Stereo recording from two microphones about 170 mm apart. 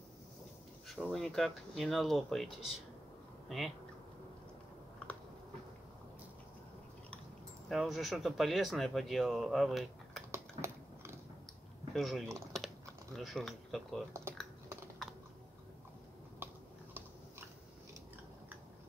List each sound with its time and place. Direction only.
0.8 s speech: centre (ahead or behind)
5.0 s a sound: 10° left (ahead or behind)
7.6 s speech: centre (ahead or behind)
10.3 s typing: 15° right (ahead or behind)
11.9 s speech: centre (ahead or behind)
12.5 s typing: centre (ahead or behind)